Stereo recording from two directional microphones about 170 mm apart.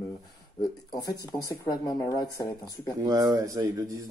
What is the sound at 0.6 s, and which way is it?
Speech, 20° left (ahead or behind).